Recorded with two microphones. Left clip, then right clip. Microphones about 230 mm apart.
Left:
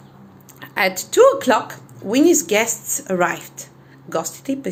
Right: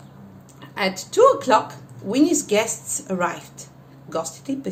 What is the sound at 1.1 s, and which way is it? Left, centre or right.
A woman's voice, left.